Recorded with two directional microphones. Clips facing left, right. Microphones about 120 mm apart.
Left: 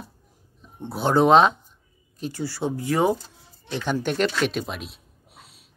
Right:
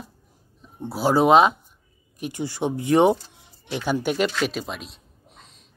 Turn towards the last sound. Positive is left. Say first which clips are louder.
# even
turn(degrees=5)  # may be behind; listen again after turning